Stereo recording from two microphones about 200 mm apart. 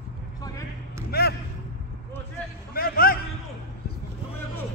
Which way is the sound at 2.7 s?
50° left (ahead or behind).